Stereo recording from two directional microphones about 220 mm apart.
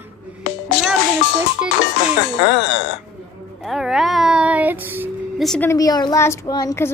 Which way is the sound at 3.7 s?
Centre (ahead or behind).